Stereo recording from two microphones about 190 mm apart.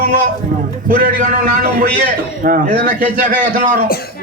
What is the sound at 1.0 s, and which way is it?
Speech, 40° right (ahead or behind).